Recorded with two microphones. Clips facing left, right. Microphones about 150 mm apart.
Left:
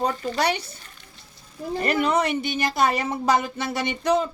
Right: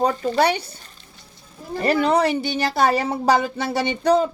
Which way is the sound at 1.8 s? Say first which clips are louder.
Right 4 dB; 30° right (ahead or behind).